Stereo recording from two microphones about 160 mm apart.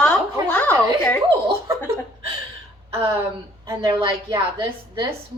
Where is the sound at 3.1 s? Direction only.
15° right (ahead or behind).